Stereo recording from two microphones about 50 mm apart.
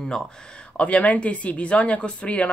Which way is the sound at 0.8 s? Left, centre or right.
Left.